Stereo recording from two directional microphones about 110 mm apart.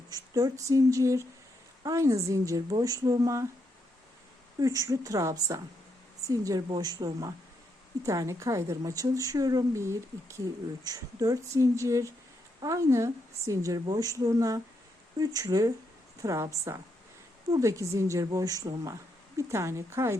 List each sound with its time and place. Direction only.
0.1 s a woman's voice: 30° right (ahead or behind)
4.6 s a woman's voice: 30° right (ahead or behind)
17.5 s a woman's voice: 30° right (ahead or behind)